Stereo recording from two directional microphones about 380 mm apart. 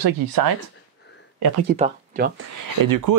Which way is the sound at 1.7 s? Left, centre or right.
Right.